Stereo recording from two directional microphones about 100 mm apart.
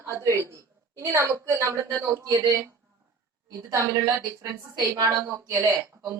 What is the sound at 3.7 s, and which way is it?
A woman's voice, 35° right (ahead or behind).